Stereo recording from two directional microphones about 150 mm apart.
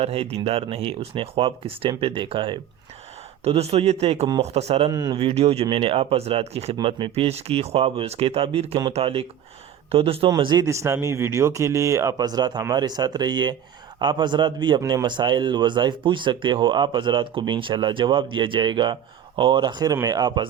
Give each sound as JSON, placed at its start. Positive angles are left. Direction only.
{"t": 0.0, "sound": "a man's voice", "side_deg": -40}
{"t": 4.9, "sound": "speech", "side_deg": -25}
{"t": 5.1, "sound": "a man's voice", "side_deg": -40}